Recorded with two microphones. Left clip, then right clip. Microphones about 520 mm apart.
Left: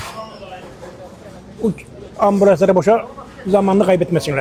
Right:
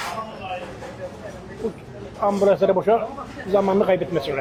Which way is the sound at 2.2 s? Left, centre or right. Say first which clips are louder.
Left 6 dB; left.